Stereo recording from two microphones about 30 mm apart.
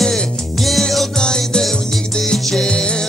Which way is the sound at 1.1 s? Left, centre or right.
Left.